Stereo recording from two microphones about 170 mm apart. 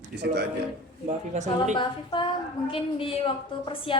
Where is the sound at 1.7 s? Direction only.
30° left (ahead or behind).